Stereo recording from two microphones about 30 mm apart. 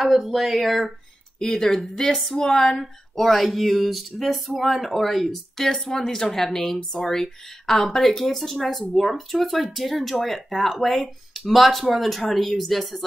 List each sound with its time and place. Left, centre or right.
0.0 s speech: centre
0.6 s speech: centre
1.4 s speech: left
1.7 s speech: centre
2.3 s speech: left
2.8 s speech: centre